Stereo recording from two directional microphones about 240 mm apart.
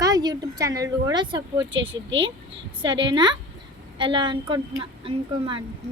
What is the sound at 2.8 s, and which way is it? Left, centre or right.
A woman's voice, centre.